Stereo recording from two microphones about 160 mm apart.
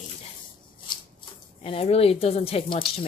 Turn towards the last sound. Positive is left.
turn(degrees=30)  # may be behind; listen again after turning